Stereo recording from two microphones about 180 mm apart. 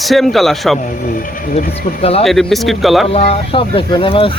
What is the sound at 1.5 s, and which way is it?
Speech, 35° left (ahead or behind).